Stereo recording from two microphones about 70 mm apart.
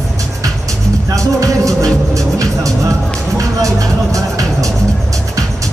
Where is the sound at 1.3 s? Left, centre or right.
Right.